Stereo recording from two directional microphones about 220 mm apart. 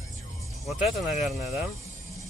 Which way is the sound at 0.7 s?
Centre (ahead or behind).